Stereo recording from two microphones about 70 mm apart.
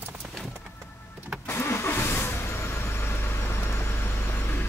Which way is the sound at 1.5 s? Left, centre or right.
Left.